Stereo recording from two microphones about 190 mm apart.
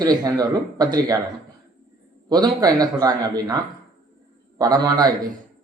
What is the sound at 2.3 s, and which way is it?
A man's voice, 20° right (ahead or behind).